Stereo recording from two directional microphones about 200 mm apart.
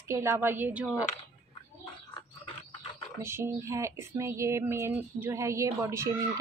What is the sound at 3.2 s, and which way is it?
Speech, 10° right (ahead or behind).